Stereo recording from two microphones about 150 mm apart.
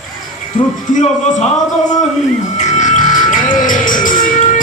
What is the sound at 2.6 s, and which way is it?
Music, 55° left (ahead or behind).